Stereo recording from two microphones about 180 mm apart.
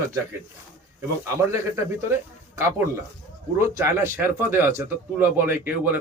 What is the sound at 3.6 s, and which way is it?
Speech, 15° right (ahead or behind).